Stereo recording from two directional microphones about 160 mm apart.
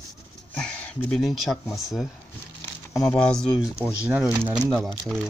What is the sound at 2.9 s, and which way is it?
Speech, 5° left (ahead or behind).